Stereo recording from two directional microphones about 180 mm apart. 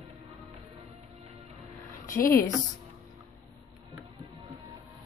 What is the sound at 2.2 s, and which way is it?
Speech, 15° left (ahead or behind).